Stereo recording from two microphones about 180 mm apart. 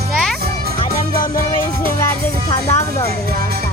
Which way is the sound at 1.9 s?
15° left (ahead or behind).